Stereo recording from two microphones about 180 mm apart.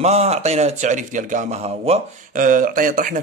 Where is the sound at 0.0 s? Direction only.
35° right (ahead or behind).